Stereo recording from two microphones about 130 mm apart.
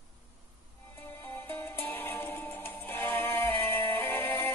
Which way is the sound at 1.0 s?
15° left (ahead or behind).